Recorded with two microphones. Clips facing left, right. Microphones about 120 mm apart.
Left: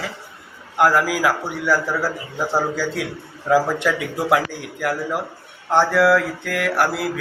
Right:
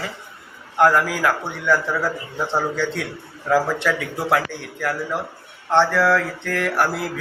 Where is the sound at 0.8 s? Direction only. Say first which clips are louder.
Even; 5° left (ahead or behind).